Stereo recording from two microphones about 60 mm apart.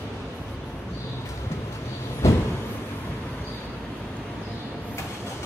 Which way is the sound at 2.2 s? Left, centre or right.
Left.